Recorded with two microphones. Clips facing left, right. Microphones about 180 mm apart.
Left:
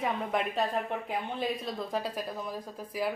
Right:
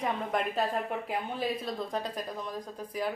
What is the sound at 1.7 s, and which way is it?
Speech, centre (ahead or behind).